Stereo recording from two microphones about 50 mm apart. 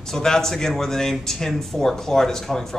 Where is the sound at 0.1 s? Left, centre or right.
Centre.